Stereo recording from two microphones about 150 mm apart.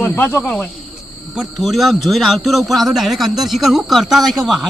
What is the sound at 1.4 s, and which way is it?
A man's voice, centre (ahead or behind).